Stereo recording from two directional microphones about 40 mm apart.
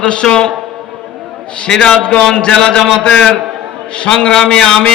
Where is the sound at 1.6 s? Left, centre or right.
Left.